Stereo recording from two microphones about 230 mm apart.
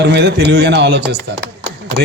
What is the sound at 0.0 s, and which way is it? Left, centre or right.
A man's voice, right.